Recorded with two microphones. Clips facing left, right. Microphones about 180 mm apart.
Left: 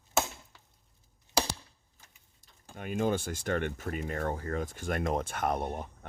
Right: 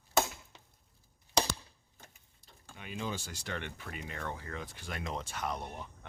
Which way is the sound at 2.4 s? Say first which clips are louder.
Left 8 dB; 50° left (ahead or behind).